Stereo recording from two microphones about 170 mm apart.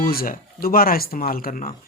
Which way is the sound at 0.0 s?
60° left (ahead or behind).